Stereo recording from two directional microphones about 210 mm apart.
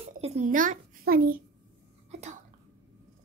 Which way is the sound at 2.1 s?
35° right (ahead or behind).